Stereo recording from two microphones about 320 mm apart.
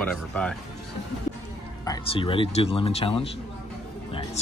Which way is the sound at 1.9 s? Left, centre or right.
Centre.